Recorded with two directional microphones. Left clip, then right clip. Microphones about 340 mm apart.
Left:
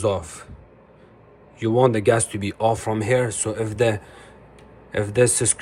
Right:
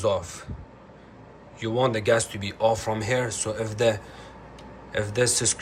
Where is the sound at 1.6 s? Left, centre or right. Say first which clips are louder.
Left 6 dB; centre.